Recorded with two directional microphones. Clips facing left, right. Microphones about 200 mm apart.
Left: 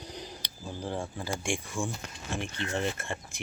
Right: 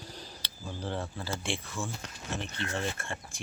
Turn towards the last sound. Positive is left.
turn(degrees=20)  # may be behind; listen again after turning